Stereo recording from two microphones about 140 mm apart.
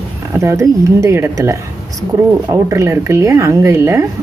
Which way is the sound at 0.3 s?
20° right (ahead or behind).